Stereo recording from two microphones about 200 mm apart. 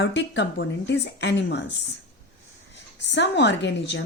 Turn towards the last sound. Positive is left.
turn(degrees=65)  # may be behind; listen again after turning